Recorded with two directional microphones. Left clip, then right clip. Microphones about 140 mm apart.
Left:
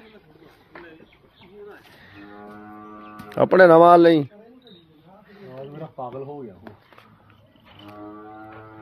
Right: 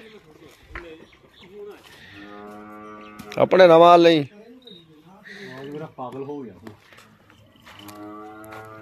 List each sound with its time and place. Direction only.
2.4 s music: centre (ahead or behind)
3.3 s speech: 35° left (ahead or behind)
5.2 s a sound: 5° left (ahead or behind)
7.8 s music: 5° right (ahead or behind)